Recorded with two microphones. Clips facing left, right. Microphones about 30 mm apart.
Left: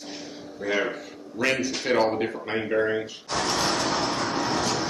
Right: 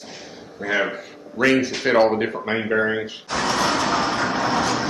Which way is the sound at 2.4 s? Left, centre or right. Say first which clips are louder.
Right 3 dB; right.